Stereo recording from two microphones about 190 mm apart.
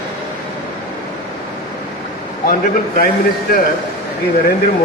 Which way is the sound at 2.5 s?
50° left (ahead or behind).